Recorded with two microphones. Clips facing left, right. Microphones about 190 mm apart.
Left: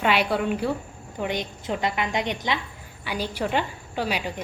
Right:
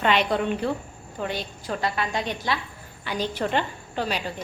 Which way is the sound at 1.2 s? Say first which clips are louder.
Left 2 dB; 15° left (ahead or behind).